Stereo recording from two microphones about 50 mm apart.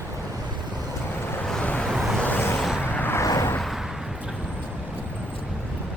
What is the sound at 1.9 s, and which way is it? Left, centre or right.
Vehicle, centre.